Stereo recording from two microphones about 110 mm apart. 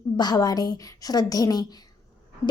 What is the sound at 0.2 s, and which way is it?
A woman's voice, 35° left (ahead or behind).